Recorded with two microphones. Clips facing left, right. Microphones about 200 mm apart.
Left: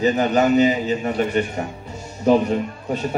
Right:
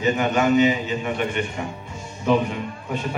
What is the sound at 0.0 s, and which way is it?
A man's voice, 35° left (ahead or behind).